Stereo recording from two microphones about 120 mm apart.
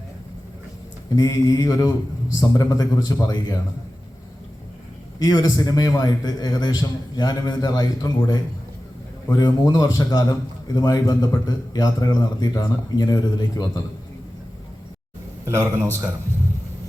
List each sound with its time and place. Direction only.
1.1 s a man's voice: 30° left (ahead or behind)
5.2 s a man's voice: 30° left (ahead or behind)
9.4 s a man's voice: 30° left (ahead or behind)
15.4 s a man's voice: 20° right (ahead or behind)